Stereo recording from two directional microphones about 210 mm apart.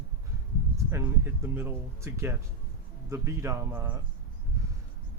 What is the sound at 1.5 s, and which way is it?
Speech, 10° right (ahead or behind).